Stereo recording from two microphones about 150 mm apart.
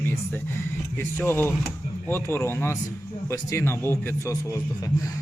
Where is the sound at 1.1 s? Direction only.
15° left (ahead or behind).